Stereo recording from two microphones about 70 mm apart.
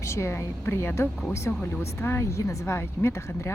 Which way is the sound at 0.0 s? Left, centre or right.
Left.